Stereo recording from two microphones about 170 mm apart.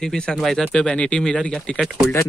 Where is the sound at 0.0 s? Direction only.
5° left (ahead or behind).